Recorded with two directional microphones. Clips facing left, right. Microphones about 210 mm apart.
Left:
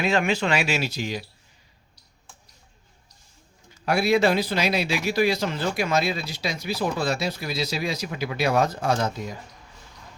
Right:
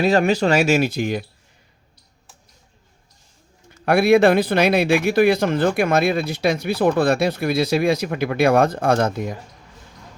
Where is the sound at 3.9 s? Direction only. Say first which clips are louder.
Right 7 dB; 55° right (ahead or behind).